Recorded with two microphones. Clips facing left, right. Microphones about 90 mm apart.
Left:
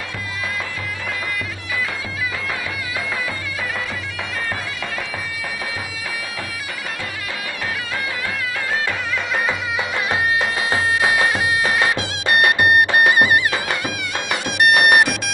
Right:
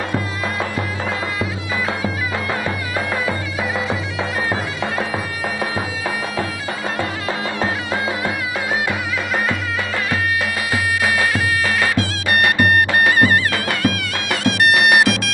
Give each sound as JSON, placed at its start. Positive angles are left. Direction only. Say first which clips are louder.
{"t": 10.7, "sound": "music", "louder": "left 1 dB", "side_deg": 25}
{"t": 14.3, "sound": "bagpipes", "louder": "right 1 dB", "side_deg": 5}
{"t": 15.0, "sound": "music", "louder": "right 1 dB", "side_deg": 0}